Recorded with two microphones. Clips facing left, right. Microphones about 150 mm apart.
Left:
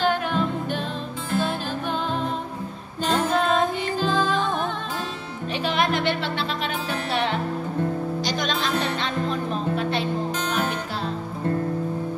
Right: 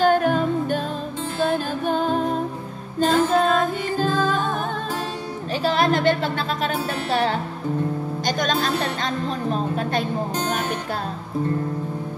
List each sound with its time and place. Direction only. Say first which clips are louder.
0.0 s music: right 5 dB; 45° right (ahead or behind)
1.9 s music: right 6 dB; 45° right (ahead or behind)
5.6 s a sound: right 4 dB; 40° right (ahead or behind)
7.1 s music: right 2 dB; 40° right (ahead or behind)